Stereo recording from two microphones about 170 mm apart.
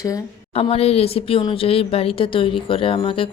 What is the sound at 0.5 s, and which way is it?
Speech, 35° left (ahead or behind).